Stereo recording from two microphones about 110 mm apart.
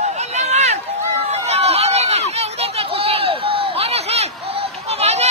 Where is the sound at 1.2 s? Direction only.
80° right.